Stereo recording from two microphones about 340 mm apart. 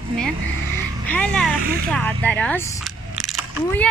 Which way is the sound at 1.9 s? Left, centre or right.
Centre.